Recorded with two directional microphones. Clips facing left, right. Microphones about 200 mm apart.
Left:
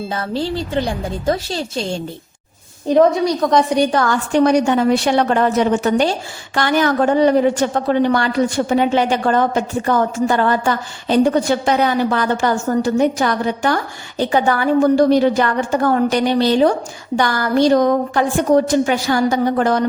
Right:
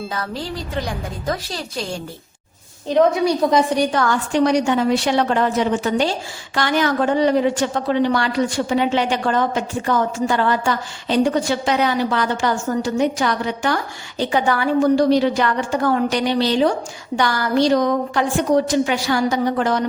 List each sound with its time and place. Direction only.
0.1 s speech: 30° left (ahead or behind)
2.8 s a woman's voice: 10° left (ahead or behind)
4.3 s a woman's voice: 55° left (ahead or behind)